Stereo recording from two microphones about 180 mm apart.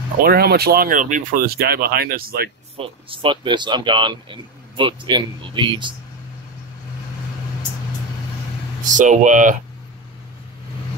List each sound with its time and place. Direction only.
0.2 s speech: 60° right (ahead or behind)
2.8 s speech: 30° right (ahead or behind)
8.8 s speech: 45° right (ahead or behind)